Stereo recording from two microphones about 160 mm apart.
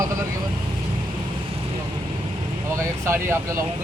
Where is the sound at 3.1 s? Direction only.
15° right (ahead or behind).